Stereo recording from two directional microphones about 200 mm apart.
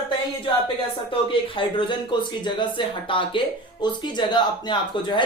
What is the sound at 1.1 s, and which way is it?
Speech, 25° left (ahead or behind).